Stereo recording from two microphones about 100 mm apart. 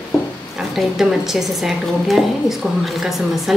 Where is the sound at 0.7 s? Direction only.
5° right (ahead or behind).